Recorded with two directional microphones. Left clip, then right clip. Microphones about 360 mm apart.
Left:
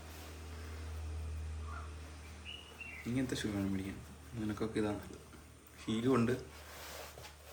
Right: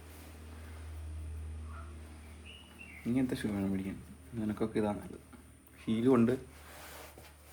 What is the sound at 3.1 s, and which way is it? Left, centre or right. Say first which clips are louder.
Speech: right 4 dB; centre.